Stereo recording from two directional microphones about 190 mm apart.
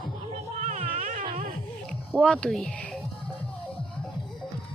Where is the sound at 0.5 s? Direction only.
40° right (ahead or behind).